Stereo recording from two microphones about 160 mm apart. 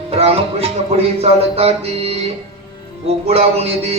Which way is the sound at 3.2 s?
40° right (ahead or behind).